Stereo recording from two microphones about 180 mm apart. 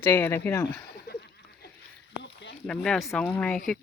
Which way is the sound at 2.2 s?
75° left (ahead or behind).